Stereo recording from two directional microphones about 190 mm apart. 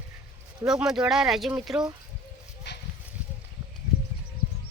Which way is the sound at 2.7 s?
65° left (ahead or behind).